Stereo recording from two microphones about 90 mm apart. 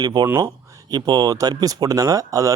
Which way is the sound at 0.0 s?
55° right (ahead or behind).